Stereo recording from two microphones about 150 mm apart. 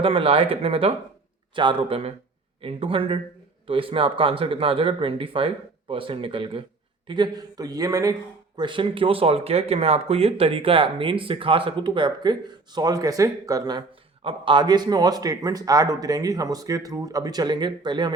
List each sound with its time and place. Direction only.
0.0 s a man's voice: 40° right (ahead or behind)